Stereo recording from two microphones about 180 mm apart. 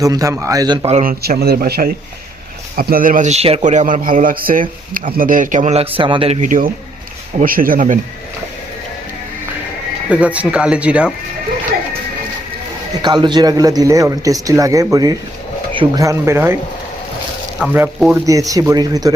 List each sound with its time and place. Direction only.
0.0 s speech: 20° right (ahead or behind)
0.9 s a man's voice: 55° right (ahead or behind); by 6.5 s 35° right (ahead or behind)
7.3 s a man's voice: 50° right (ahead or behind)
10.1 s speech: 5° right (ahead or behind)
13.0 s speech: 25° right (ahead or behind)
16.0 s speech: 15° right (ahead or behind)
17.6 s speech: 5° right (ahead or behind)
18.3 s speech: 20° right (ahead or behind)